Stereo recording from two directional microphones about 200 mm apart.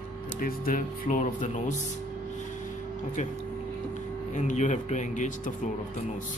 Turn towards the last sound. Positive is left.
turn(degrees=40)  # may be behind; listen again after turning